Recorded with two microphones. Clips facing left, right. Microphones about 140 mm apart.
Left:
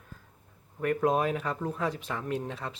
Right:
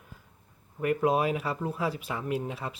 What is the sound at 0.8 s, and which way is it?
Speech, 10° right (ahead or behind).